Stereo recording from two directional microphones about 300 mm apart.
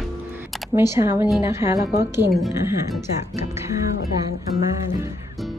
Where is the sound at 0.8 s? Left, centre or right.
Centre.